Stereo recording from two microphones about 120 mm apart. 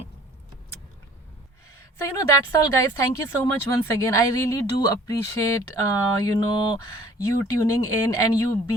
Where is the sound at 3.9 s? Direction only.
25° left (ahead or behind).